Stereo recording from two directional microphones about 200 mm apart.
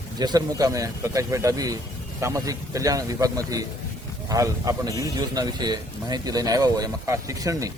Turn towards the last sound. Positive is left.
turn(degrees=-15)  # may be behind; listen again after turning